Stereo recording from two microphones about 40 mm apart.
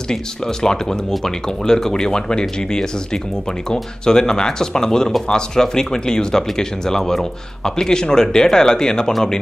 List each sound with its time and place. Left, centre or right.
0.1 s speech: centre